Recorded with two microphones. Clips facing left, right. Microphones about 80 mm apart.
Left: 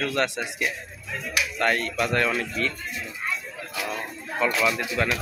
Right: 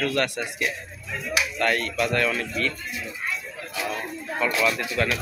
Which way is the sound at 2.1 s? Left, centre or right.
Left.